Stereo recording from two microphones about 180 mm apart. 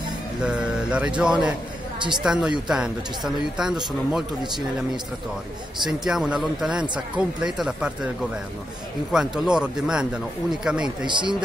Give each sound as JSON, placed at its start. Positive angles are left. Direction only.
{"t": 0.4, "sound": "speech", "side_deg": -5}
{"t": 2.0, "sound": "speech", "side_deg": -25}
{"t": 2.2, "sound": "speech", "side_deg": -5}
{"t": 5.9, "sound": "speech", "side_deg": 0}
{"t": 9.1, "sound": "speech", "side_deg": -5}
{"t": 11.1, "sound": "a man's voice", "side_deg": -25}